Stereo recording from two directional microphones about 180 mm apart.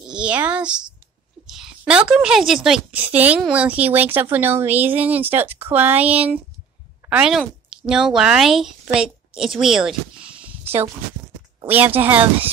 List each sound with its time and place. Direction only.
0.1 s a woman's voice: 5° right (ahead or behind)
11.6 s a woman's voice: 10° right (ahead or behind)